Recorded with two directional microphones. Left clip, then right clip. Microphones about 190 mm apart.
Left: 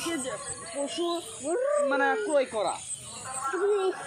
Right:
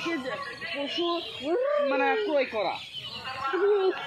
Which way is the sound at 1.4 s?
20° right (ahead or behind).